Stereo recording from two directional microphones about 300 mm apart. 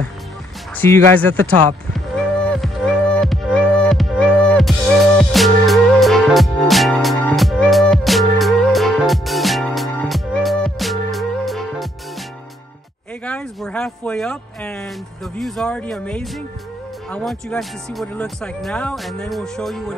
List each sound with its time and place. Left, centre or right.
0.7 s speech: centre
2.5 s music: centre
13.2 s speech: centre